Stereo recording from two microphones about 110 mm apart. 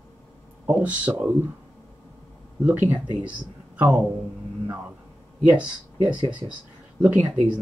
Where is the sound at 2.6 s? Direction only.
15° right (ahead or behind).